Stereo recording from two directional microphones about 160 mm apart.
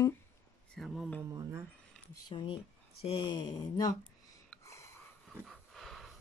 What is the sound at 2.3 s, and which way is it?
Speech, 30° left (ahead or behind).